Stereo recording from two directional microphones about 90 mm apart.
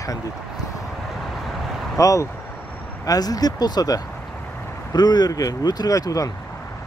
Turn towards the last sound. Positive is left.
turn(degrees=40)  # may be behind; listen again after turning